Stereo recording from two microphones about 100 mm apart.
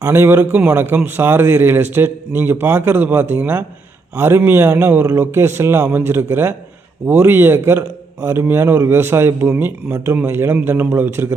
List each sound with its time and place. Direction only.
0.0 s a man's voice: 25° right (ahead or behind)